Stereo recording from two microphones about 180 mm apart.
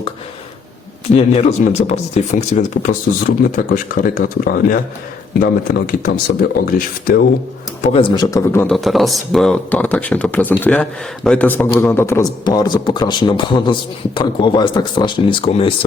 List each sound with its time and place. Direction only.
1.1 s speech: 40° left (ahead or behind)
7.9 s speech: 25° left (ahead or behind)
8.6 s a man's voice: centre (ahead or behind); by 15.9 s 30° left (ahead or behind)